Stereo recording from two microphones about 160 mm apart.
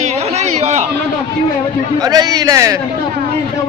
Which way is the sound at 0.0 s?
45° right (ahead or behind).